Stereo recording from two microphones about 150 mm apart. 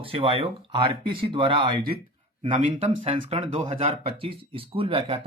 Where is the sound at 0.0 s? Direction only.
40° right (ahead or behind).